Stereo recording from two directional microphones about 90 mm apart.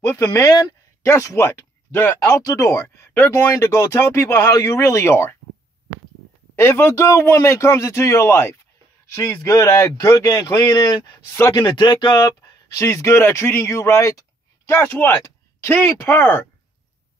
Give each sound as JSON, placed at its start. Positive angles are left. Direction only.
{"t": 0.1, "sound": "speech", "side_deg": 30}
{"t": 1.0, "sound": "speech", "side_deg": 30}
{"t": 2.4, "sound": "speech", "side_deg": 40}
{"t": 6.5, "sound": "speech", "side_deg": 25}
{"t": 11.2, "sound": "speech", "side_deg": 25}
{"t": 11.5, "sound": "speech", "side_deg": 50}
{"t": 12.7, "sound": "speech", "side_deg": 35}
{"t": 14.7, "sound": "speech", "side_deg": 25}